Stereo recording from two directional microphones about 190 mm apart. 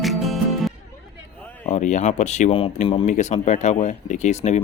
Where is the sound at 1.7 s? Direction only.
40° left (ahead or behind).